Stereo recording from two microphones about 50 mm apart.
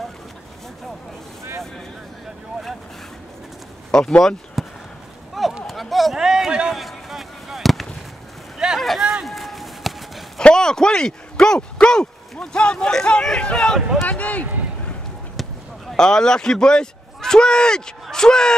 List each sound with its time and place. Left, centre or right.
3.9 s speech: centre
4.6 s a sound: centre
8.7 s run: centre
10.4 s speech: centre
14.0 s speech: left
15.4 s a sound: centre
16.0 s speech: centre